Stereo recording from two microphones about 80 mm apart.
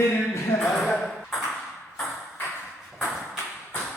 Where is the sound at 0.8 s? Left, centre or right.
Centre.